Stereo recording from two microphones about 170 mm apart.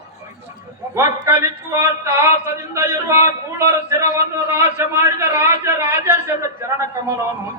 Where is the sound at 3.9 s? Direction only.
15° right (ahead or behind).